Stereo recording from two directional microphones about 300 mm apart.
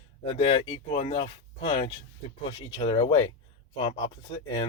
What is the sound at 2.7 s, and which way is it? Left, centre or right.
Speech, centre.